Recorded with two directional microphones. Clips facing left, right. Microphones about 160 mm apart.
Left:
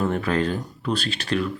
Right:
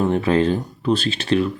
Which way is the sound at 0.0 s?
25° right (ahead or behind).